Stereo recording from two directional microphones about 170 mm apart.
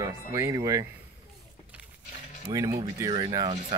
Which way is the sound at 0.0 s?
15° right (ahead or behind).